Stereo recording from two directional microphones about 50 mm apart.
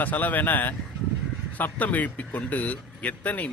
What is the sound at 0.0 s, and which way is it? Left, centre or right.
A man's voice, left.